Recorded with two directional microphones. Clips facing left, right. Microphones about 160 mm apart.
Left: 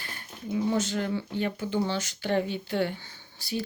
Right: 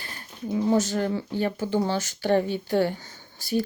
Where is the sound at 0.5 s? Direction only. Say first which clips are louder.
Right 4 dB; 40° right (ahead or behind).